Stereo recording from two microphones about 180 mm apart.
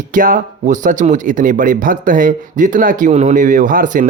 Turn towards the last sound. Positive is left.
turn(degrees=-50)  # may be behind; listen again after turning